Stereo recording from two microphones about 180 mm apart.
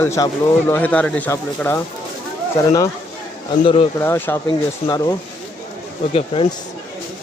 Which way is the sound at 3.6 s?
30° left (ahead or behind).